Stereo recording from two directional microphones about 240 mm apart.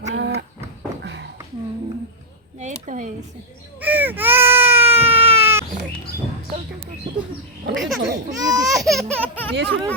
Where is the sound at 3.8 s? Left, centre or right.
Centre.